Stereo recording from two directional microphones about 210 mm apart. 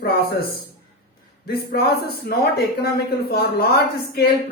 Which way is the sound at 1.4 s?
45° left (ahead or behind).